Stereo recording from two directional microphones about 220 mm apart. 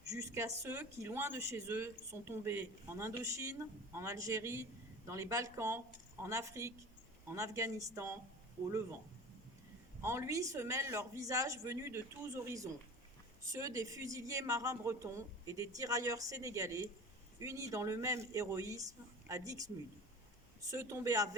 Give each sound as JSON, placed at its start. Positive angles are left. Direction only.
{"t": 0.1, "sound": "speech", "side_deg": -15}
{"t": 10.0, "sound": "speech", "side_deg": -10}
{"t": 20.7, "sound": "speech", "side_deg": -15}